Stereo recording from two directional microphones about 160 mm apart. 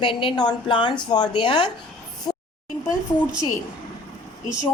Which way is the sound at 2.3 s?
25° left (ahead or behind).